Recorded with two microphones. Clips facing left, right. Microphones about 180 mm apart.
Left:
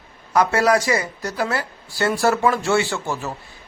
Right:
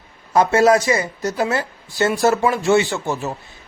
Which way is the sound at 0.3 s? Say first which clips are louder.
Right 3 dB; 25° right (ahead or behind).